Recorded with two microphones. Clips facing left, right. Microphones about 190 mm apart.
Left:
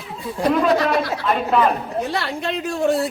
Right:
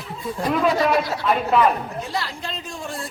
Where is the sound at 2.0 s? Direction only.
65° left (ahead or behind).